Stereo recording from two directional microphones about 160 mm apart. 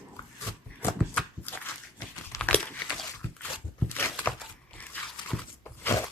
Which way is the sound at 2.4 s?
10° left (ahead or behind).